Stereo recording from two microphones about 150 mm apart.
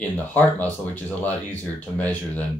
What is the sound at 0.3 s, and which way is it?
Speech, 10° left (ahead or behind).